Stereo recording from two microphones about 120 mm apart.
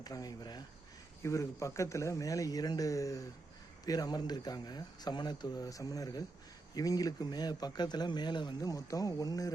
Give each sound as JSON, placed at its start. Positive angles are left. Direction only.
{"t": 0.0, "sound": "speech", "side_deg": 30}